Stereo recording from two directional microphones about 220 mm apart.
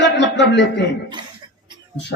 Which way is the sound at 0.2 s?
50° left (ahead or behind).